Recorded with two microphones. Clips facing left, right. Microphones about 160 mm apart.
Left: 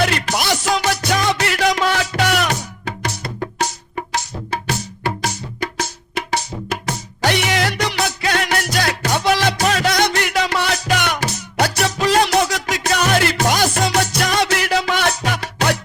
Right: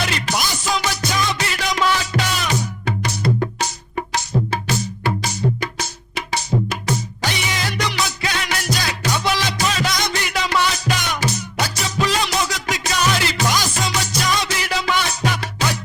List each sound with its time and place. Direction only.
0.0 s music: 55° left (ahead or behind)
4.5 s music: 50° left (ahead or behind)